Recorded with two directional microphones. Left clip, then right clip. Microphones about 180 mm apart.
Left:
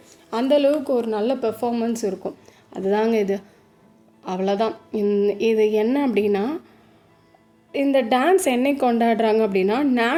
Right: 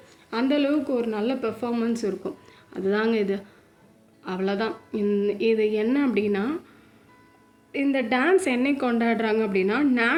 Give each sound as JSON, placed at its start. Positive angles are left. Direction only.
{"t": 0.3, "sound": "a woman's voice", "side_deg": 45}
{"t": 7.7, "sound": "a woman's voice", "side_deg": 45}